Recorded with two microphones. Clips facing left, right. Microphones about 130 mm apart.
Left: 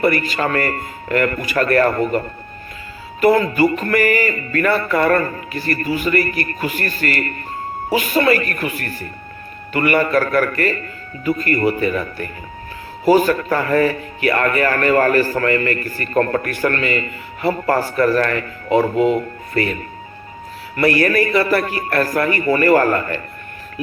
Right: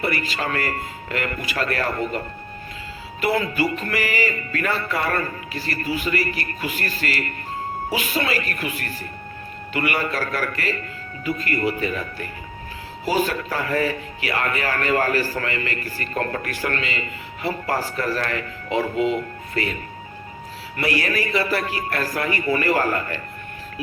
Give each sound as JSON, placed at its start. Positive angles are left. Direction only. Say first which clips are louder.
{"t": 0.0, "sound": "speech", "louder": "left 7 dB", "side_deg": 50}
{"t": 20.7, "sound": "speech", "louder": "left 8 dB", "side_deg": 50}